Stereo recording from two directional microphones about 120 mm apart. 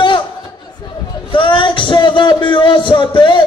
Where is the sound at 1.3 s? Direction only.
45° left (ahead or behind).